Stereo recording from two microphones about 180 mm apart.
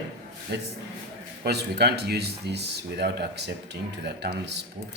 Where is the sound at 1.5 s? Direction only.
65° right (ahead or behind).